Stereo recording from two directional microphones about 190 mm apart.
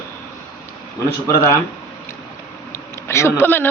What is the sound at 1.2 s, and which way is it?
Speech, 15° left (ahead or behind).